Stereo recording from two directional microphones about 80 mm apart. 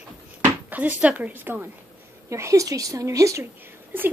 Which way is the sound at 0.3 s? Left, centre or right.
Right.